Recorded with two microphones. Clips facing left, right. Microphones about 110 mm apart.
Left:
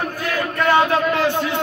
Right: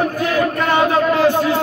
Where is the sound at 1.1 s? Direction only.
45° right (ahead or behind).